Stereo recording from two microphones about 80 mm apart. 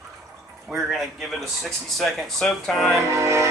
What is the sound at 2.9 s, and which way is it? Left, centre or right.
Speech, right.